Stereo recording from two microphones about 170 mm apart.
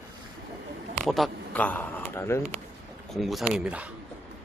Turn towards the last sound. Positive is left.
turn(degrees=-5)  # may be behind; listen again after turning